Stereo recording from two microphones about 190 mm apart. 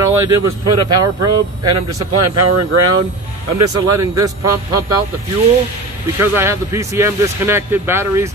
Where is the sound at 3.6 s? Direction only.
20° right (ahead or behind).